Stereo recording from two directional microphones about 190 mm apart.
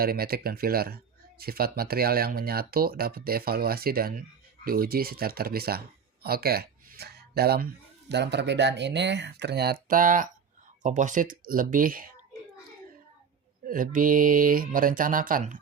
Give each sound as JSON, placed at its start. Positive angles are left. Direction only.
{"t": 0.0, "sound": "speech", "side_deg": -50}
{"t": 13.7, "sound": "speech", "side_deg": -45}